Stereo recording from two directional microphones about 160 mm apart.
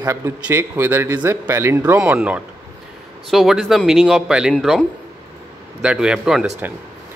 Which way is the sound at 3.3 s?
Centre (ahead or behind).